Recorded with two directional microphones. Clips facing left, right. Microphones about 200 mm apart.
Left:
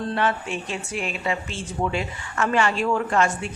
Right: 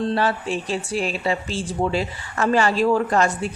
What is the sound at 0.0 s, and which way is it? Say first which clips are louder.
Speech: right 3 dB; 35° right (ahead or behind).